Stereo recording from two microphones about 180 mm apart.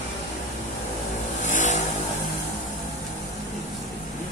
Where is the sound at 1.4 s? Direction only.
45° left (ahead or behind).